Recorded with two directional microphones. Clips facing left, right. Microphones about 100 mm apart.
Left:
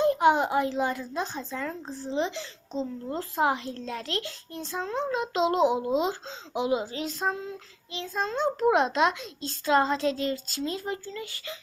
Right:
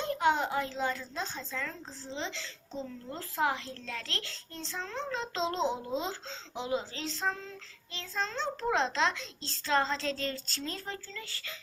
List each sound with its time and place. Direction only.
0.0 s a child's voice: 20° left (ahead or behind)